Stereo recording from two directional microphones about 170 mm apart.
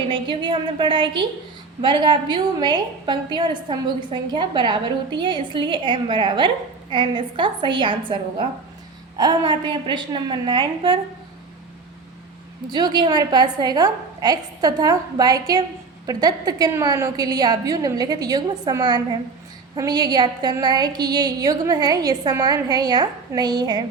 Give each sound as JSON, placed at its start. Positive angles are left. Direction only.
{"t": 0.1, "sound": "a woman's voice", "side_deg": -30}
{"t": 12.7, "sound": "a woman's voice", "side_deg": -25}